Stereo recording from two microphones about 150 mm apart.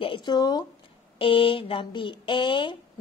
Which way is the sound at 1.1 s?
35° left (ahead or behind).